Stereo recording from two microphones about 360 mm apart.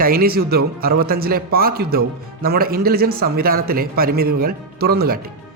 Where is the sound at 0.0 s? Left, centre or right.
Right.